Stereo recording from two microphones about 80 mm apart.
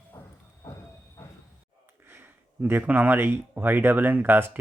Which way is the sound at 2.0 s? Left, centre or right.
Right.